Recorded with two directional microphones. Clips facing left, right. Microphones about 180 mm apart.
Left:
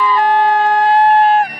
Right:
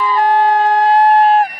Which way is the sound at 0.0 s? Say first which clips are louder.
Even; 40° right (ahead or behind).